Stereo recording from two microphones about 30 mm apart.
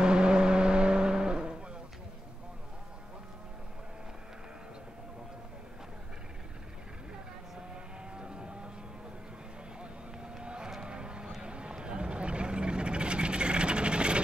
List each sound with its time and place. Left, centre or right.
0.0 s vehicle: right
7.7 s vehicle: right
9.8 s vehicle: right
10.8 s a sound: right
11.4 s vehicle: right